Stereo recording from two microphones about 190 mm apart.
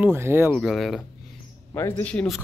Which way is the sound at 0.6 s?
Centre (ahead or behind).